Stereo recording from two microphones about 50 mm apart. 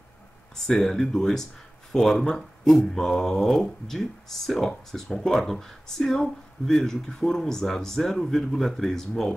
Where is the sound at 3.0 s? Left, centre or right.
Centre.